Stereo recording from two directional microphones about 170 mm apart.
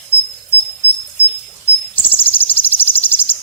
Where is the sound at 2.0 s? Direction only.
10° left (ahead or behind).